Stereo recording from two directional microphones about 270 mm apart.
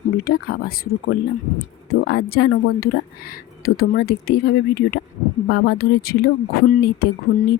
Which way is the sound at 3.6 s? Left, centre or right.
Left.